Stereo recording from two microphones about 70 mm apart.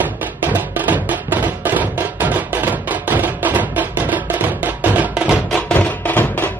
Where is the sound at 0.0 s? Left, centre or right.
Right.